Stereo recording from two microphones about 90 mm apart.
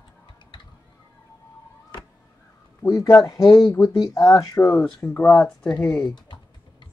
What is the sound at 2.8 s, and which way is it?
Speech, 40° left (ahead or behind).